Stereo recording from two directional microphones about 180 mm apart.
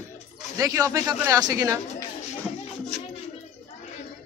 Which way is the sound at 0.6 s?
20° right (ahead or behind).